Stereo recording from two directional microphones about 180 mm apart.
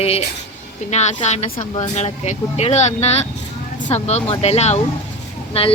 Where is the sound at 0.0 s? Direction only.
35° left (ahead or behind).